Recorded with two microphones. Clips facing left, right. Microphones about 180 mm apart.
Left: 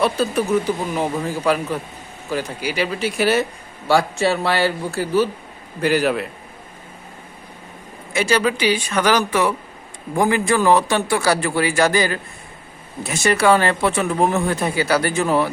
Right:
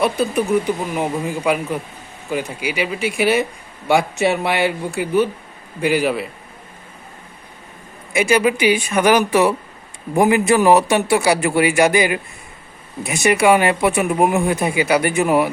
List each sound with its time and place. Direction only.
0.0 s speech: 15° right (ahead or behind)
8.1 s a man's voice: 10° right (ahead or behind)
13.2 s speech: 15° right (ahead or behind)